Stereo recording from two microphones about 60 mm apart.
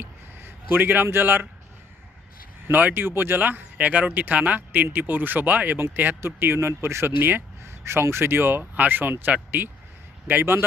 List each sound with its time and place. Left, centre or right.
0.0 s a sound: right
1.0 s speech: right
2.7 s speech: right